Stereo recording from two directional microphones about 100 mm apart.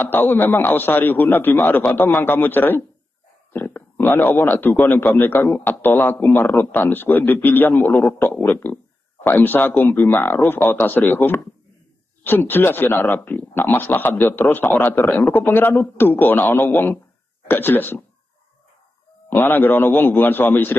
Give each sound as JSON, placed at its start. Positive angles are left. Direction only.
{"t": 0.0, "sound": "a man's voice", "side_deg": 20}
{"t": 19.2, "sound": "a man's voice", "side_deg": 20}